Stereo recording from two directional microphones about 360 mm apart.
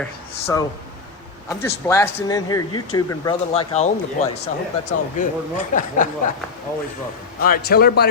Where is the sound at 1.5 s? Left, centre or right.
Centre.